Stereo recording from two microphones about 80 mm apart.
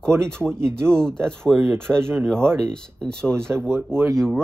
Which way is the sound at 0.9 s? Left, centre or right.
Centre.